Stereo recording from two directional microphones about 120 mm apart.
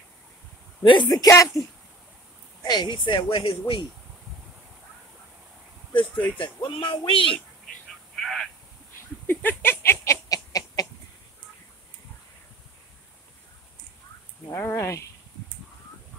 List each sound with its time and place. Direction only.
0.8 s a man's voice: 35° left (ahead or behind)
2.6 s speech: 35° left (ahead or behind)
6.3 s speech: 45° left (ahead or behind)
8.2 s a sound: centre (ahead or behind)
9.3 s a sound: 15° left (ahead or behind)
10.2 s chicken: 30° left (ahead or behind)
14.5 s speech: 20° left (ahead or behind)